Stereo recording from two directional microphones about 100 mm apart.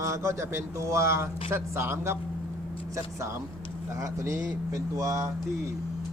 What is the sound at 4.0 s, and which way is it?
A man's voice, 35° right (ahead or behind).